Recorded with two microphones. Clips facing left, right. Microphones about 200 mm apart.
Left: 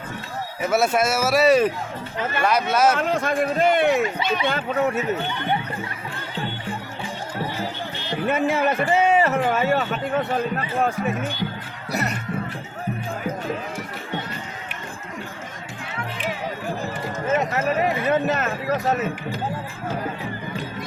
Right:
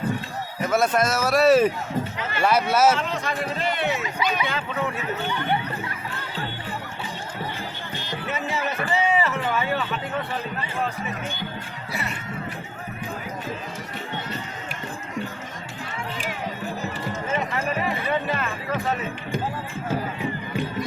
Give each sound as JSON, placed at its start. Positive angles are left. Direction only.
{"t": 0.6, "sound": "speech", "side_deg": 5}
{"t": 3.0, "sound": "a man's voice", "side_deg": 50}
{"t": 8.3, "sound": "a man's voice", "side_deg": 55}
{"t": 11.9, "sound": "music", "side_deg": 40}
{"t": 17.1, "sound": "music", "side_deg": 45}